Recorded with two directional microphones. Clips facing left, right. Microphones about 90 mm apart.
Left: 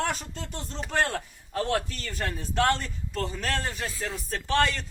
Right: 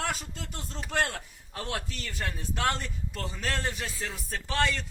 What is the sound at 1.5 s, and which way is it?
A man's voice, 50° left (ahead or behind).